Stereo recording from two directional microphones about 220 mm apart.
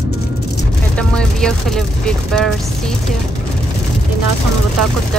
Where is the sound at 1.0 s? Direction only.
5° left (ahead or behind).